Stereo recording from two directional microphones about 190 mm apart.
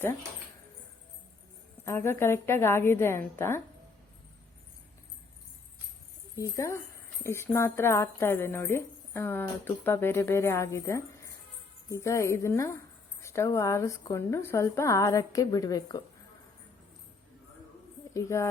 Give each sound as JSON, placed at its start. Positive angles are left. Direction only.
{"t": 1.8, "sound": "speech", "side_deg": 15}
{"t": 6.3, "sound": "speech", "side_deg": 15}
{"t": 18.1, "sound": "speech", "side_deg": 15}